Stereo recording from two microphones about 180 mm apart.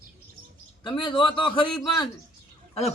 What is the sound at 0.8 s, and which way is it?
Speech, 25° left (ahead or behind).